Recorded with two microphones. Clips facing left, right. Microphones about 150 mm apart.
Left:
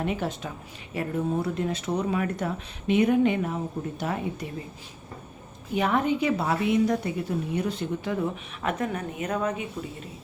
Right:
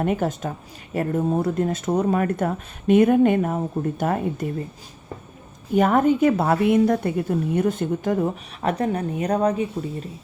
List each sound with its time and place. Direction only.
0.0 s a woman's voice: 50° right (ahead or behind)
5.7 s a woman's voice: 45° right (ahead or behind)